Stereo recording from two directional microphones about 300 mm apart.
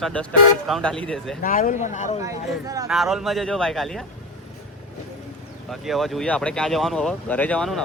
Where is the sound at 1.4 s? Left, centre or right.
Left.